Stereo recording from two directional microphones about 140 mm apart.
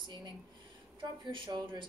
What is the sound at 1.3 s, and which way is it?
Speech, 35° right (ahead or behind).